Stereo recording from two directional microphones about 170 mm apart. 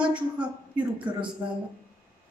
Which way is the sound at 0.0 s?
5° right (ahead or behind).